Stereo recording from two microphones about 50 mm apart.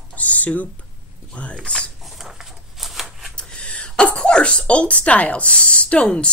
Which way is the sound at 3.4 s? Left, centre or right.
Centre.